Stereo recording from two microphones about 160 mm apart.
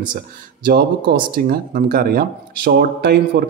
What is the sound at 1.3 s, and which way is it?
Speech, 65° right (ahead or behind).